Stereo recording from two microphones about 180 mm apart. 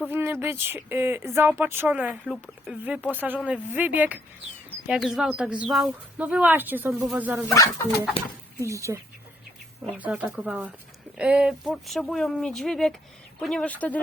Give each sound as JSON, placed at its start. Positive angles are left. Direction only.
{"t": 0.1, "sound": "speech", "side_deg": -10}
{"t": 7.4, "sound": "speech", "side_deg": 20}
{"t": 8.6, "sound": "speech", "side_deg": -15}